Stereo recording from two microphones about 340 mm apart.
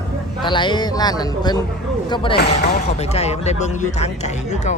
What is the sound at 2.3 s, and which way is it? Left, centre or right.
Speech, left.